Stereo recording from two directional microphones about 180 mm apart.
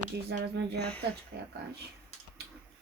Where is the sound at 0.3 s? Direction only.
70° right (ahead or behind).